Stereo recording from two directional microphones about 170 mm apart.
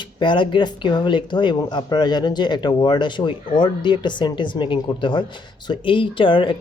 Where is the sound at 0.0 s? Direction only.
30° left (ahead or behind).